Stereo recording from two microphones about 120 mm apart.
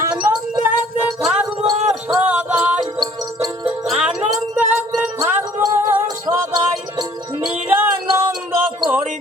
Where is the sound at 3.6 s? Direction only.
10° right (ahead or behind).